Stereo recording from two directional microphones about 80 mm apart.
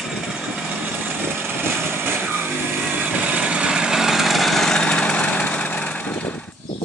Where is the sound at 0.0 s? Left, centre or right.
Centre.